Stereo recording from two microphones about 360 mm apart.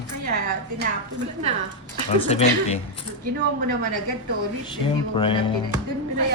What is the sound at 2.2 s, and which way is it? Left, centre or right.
Speech, centre.